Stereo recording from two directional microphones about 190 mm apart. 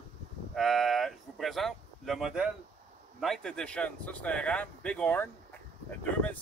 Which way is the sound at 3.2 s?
5° left (ahead or behind).